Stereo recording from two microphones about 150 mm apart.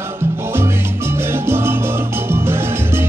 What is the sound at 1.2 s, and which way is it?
Music, 15° right (ahead or behind).